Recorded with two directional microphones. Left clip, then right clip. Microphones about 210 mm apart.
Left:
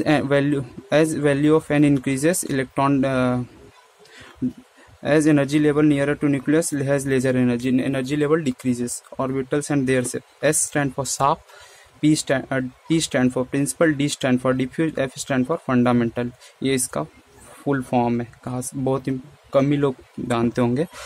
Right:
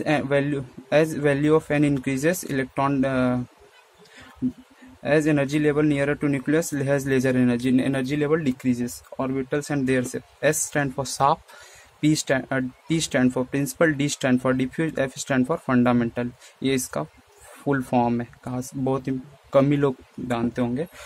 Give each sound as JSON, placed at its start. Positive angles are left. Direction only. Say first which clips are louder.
{"t": 0.0, "sound": "speech", "louder": "left 3 dB", "side_deg": 15}
{"t": 5.0, "sound": "speech", "louder": "left 3 dB", "side_deg": 15}
{"t": 20.2, "sound": "speech", "louder": "left 4 dB", "side_deg": 20}